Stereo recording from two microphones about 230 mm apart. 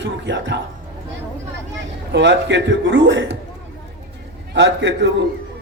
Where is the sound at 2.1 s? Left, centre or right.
Right.